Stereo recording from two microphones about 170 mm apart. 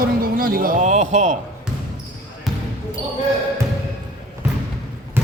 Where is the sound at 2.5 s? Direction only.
Centre (ahead or behind).